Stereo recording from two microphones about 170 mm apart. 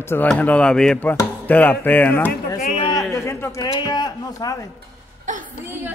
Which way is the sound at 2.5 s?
45° left (ahead or behind).